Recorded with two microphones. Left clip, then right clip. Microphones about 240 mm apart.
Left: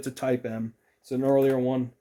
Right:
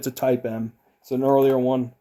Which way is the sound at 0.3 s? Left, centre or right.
Centre.